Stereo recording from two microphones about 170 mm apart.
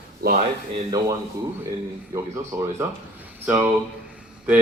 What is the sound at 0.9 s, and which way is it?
Speech, 20° right (ahead or behind).